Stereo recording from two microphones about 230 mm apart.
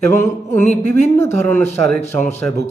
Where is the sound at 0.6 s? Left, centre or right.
Left.